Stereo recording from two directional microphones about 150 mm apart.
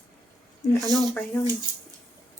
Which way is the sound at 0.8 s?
25° right (ahead or behind).